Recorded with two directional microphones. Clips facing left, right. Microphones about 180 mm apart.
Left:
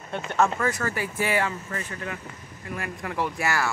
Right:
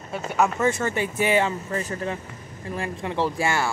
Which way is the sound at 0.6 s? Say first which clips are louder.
Right 4 dB; 25° right (ahead or behind).